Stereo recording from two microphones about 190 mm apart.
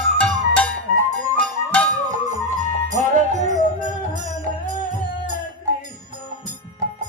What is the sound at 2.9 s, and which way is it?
Music, 40° right (ahead or behind).